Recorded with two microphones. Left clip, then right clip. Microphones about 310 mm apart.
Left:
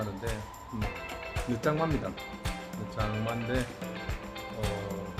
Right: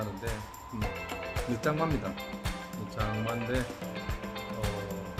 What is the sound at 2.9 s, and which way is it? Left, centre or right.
Speech, centre.